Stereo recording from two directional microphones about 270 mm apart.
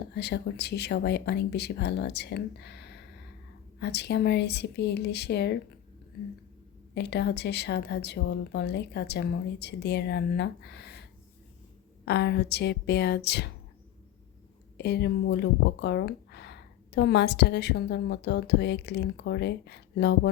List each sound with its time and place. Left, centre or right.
0.1 s speech: left
6.9 s speech: left
12.0 s speech: left
14.8 s speech: left